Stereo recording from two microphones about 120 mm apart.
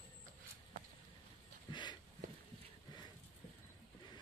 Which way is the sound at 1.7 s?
40° left (ahead or behind).